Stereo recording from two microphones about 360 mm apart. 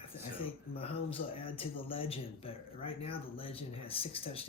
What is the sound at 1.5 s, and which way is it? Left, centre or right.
Speech, centre.